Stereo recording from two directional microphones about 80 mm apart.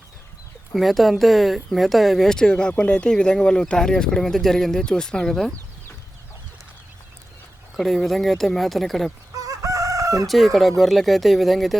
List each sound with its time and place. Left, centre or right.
0.7 s speech: centre
7.8 s speech: centre
9.3 s chicken: right
10.2 s speech: centre